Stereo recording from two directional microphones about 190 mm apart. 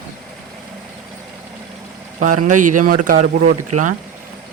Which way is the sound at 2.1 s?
40° right (ahead or behind).